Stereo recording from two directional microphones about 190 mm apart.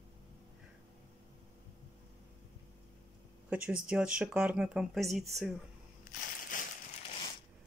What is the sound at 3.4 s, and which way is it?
Speech, 5° right (ahead or behind).